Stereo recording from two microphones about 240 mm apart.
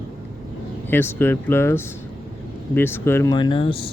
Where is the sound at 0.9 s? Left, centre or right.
Centre.